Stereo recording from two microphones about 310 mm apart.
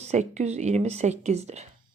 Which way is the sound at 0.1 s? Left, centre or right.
Right.